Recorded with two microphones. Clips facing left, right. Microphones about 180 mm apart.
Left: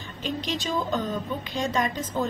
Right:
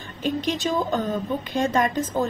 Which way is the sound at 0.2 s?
50° right (ahead or behind).